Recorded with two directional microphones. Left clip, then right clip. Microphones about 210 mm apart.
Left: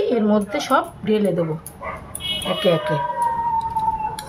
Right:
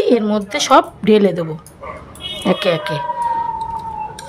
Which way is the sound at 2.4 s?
55° right (ahead or behind).